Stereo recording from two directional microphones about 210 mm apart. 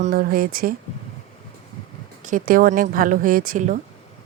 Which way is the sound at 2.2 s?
40° right (ahead or behind).